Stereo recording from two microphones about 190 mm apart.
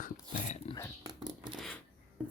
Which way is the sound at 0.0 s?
35° left (ahead or behind).